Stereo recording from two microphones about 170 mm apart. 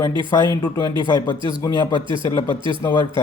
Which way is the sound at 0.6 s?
25° left (ahead or behind).